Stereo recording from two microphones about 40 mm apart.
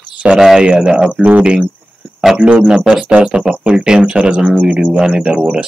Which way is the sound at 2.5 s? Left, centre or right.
Right.